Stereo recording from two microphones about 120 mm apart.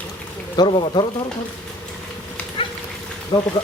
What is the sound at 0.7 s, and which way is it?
Speech, 45° left (ahead or behind).